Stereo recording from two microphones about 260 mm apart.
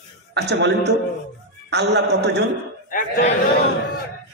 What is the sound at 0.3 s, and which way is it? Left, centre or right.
A man's voice, right.